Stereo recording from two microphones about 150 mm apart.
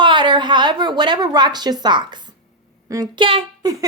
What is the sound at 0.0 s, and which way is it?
A woman's voice, 30° right (ahead or behind).